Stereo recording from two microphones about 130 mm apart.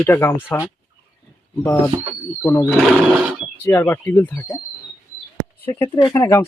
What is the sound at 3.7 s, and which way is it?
Speech, 20° left (ahead or behind).